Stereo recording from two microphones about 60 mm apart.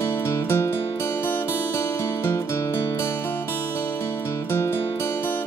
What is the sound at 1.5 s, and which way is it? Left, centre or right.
Music, left.